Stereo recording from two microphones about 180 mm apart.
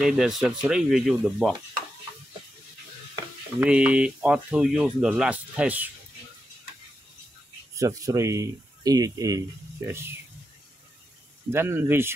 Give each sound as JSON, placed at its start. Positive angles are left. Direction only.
{"t": 0.0, "sound": "speech", "side_deg": 0}
{"t": 3.6, "sound": "speech", "side_deg": -5}
{"t": 7.7, "sound": "speech", "side_deg": -20}
{"t": 11.5, "sound": "speech", "side_deg": -10}